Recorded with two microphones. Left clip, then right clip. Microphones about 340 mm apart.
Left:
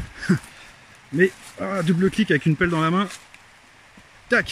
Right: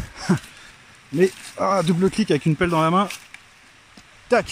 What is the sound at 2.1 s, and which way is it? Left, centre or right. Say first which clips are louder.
Speech: even; centre.